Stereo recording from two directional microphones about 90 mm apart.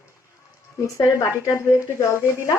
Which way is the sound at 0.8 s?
35° left (ahead or behind).